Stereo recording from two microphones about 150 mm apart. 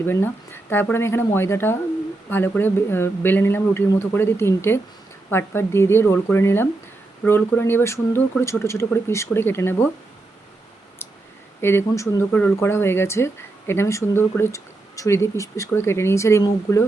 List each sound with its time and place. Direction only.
0.0 s speech: 15° left (ahead or behind)
11.6 s speech: 15° left (ahead or behind)